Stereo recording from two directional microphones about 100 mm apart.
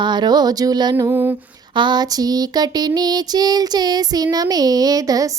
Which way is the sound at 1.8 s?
45° right (ahead or behind).